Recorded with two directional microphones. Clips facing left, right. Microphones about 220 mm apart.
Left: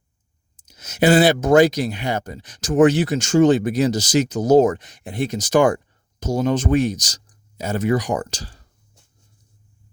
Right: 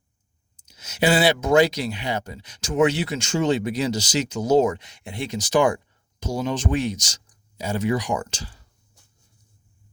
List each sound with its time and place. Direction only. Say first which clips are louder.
0.7 s speech: left 5 dB; 45° left (ahead or behind)